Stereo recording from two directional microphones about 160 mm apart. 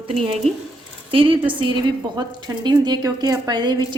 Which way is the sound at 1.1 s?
35° right (ahead or behind).